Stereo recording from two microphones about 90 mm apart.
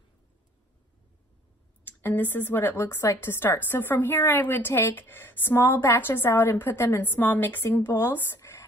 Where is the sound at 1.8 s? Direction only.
20° left (ahead or behind).